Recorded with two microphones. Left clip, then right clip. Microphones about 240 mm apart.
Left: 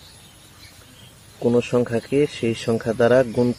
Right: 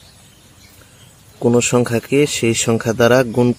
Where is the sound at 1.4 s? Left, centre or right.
Right.